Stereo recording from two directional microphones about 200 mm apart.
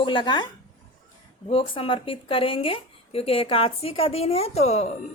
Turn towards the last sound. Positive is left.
turn(degrees=30)  # may be behind; listen again after turning